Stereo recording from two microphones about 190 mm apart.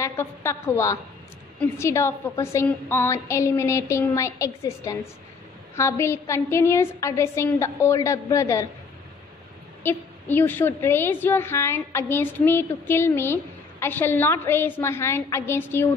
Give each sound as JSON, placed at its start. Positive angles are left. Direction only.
{"t": 0.0, "sound": "a woman's voice", "side_deg": 15}
{"t": 9.8, "sound": "a woman's voice", "side_deg": 10}